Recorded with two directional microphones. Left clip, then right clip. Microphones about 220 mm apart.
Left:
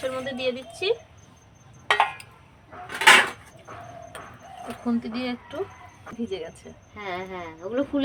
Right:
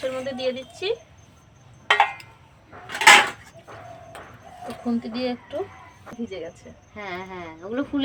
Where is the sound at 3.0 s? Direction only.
20° right (ahead or behind).